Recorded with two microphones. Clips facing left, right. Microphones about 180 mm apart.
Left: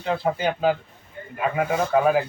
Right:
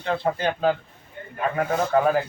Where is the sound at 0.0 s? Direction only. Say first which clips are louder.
Left 1 dB; 5° left (ahead or behind).